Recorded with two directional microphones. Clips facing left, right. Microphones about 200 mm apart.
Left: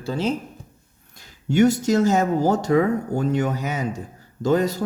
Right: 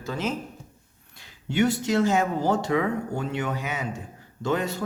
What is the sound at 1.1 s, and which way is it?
A man's voice, 45° left (ahead or behind).